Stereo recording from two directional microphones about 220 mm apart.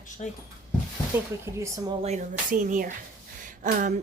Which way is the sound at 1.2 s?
10° right (ahead or behind).